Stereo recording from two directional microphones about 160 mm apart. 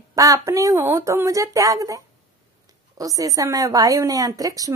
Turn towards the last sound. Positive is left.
turn(degrees=-20)  # may be behind; listen again after turning